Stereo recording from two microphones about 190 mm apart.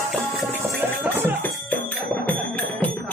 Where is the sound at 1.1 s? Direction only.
10° left (ahead or behind).